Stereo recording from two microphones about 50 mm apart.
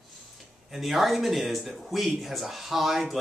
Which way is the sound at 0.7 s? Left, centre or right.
Centre.